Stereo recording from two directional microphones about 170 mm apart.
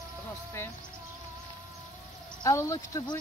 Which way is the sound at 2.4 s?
20° left (ahead or behind).